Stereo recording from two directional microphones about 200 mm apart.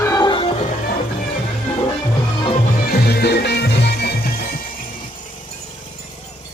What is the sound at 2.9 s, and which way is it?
Music, 50° left (ahead or behind).